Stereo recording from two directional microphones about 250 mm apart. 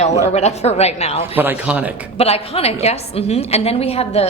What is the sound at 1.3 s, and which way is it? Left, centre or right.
Speech, centre.